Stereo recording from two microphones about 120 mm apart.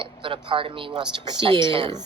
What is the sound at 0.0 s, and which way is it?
A woman's voice, 45° right (ahead or behind).